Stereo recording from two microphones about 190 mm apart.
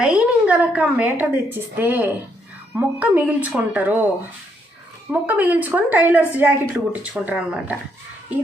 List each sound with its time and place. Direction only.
0.0 s a woman's voice: 5° right (ahead or behind)
5.2 s a woman's voice: 10° right (ahead or behind)